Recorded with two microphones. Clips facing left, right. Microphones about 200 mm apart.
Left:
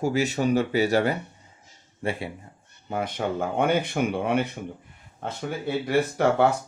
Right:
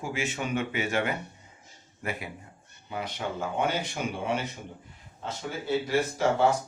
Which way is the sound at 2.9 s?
50° left (ahead or behind).